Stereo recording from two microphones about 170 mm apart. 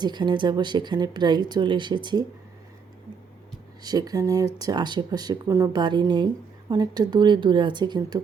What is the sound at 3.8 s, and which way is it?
Speech, 20° right (ahead or behind).